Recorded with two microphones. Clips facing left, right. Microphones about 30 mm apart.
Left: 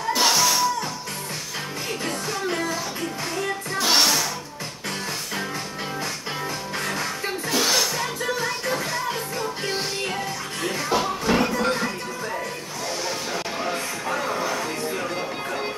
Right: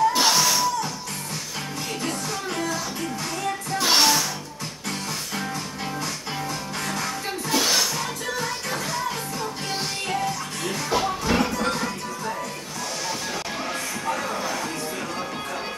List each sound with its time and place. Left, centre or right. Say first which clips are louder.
0.1 s music: even; centre
2.0 s music: left 3 dB; centre
3.7 s music: right 1 dB; centre
6.8 s music: left 1 dB; centre
7.4 s music: even; centre
10.7 s music: even; centre
13.7 s a sound: left 1 dB; centre